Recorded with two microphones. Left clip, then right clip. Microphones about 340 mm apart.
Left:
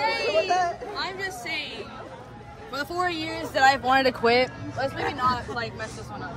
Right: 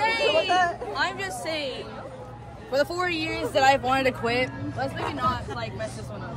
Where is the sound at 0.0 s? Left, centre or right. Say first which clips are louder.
Right 2 dB; right.